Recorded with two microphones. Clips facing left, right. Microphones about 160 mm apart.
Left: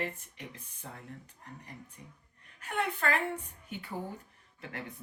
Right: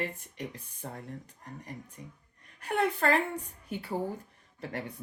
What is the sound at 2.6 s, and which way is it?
Speech, 40° right (ahead or behind).